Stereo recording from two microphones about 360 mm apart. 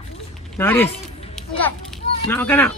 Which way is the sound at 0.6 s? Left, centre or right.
Centre.